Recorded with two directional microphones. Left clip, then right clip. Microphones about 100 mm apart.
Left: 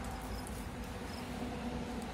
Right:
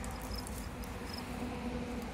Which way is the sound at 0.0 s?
25° left (ahead or behind).